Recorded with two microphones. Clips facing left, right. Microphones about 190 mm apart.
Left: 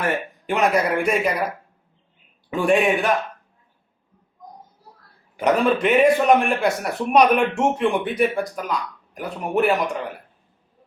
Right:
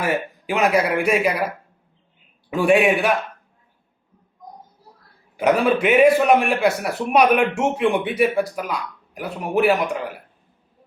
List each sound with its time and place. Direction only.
0.0 s speech: 5° right (ahead or behind)
2.5 s speech: 5° right (ahead or behind)
5.4 s speech: 5° right (ahead or behind)